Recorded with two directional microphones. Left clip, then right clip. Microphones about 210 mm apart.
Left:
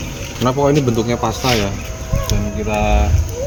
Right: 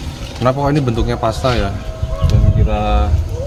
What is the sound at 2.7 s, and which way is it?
Speech, centre (ahead or behind).